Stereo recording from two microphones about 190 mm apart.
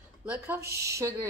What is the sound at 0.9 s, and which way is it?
Speech, 15° right (ahead or behind).